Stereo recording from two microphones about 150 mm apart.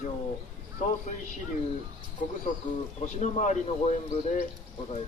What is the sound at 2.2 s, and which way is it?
Speech, 60° left (ahead or behind).